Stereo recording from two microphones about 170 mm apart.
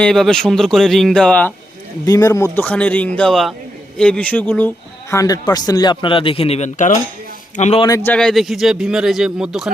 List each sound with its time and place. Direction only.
0.0 s a man's voice: 5° left (ahead or behind)
2.0 s a man's voice: 20° left (ahead or behind)
5.1 s a man's voice: 20° left (ahead or behind); by 7.8 s 40° left (ahead or behind)
7.8 s speech: 20° left (ahead or behind)
8.1 s a man's voice: 5° left (ahead or behind)